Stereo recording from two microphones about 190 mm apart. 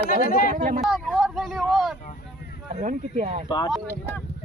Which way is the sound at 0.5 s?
45° right (ahead or behind).